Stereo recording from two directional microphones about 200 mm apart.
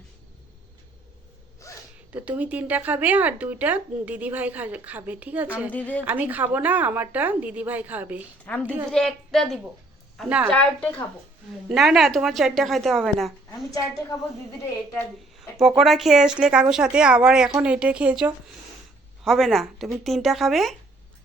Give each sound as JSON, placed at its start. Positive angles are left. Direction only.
{"t": 1.6, "sound": "gasp", "side_deg": 15}
{"t": 2.1, "sound": "speech", "side_deg": -10}
{"t": 5.7, "sound": "a woman's voice", "side_deg": 10}
{"t": 6.1, "sound": "speech", "side_deg": -10}
{"t": 8.4, "sound": "speech", "side_deg": 5}
{"t": 10.5, "sound": "speech", "side_deg": 5}
{"t": 13.7, "sound": "a woman's voice", "side_deg": 15}
{"t": 14.9, "sound": "speech", "side_deg": 0}